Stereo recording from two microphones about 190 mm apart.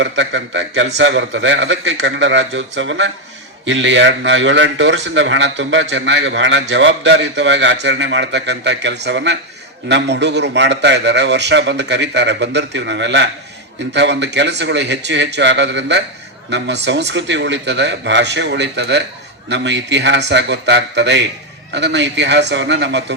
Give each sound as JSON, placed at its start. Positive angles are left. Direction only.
{"t": 0.0, "sound": "a man's voice", "side_deg": -75}